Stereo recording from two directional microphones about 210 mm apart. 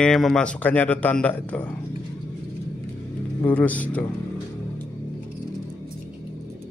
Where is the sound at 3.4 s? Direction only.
5° left (ahead or behind).